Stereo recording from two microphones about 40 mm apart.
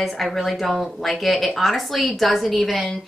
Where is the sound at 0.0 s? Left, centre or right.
Centre.